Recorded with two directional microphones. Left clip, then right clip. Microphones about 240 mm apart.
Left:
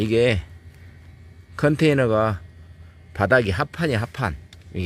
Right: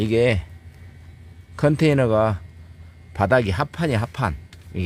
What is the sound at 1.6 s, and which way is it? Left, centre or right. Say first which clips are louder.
Speech: even; centre.